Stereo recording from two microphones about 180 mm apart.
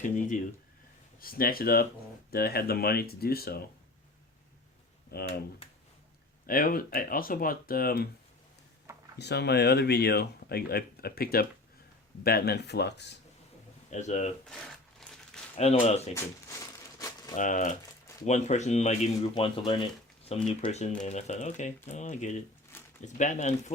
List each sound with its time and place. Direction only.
0.0 s speech: 45° left (ahead or behind)
5.1 s speech: 60° left (ahead or behind)
5.6 s a sound: 30° left (ahead or behind)
6.4 s speech: 50° left (ahead or behind)
9.1 s speech: 70° left (ahead or behind)
13.9 s speech: 40° left (ahead or behind)
15.0 s crumpling: centre (ahead or behind)
15.5 s speech: 35° left (ahead or behind)
16.1 s a sound: 15° left (ahead or behind)
17.3 s speech: 45° left (ahead or behind)
19.3 s speech: 30° left (ahead or behind)